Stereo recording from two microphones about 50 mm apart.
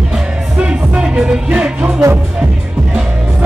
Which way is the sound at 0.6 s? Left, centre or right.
Centre.